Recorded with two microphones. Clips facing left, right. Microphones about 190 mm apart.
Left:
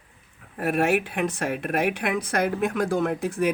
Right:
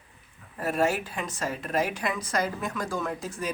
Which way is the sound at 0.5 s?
65° left (ahead or behind).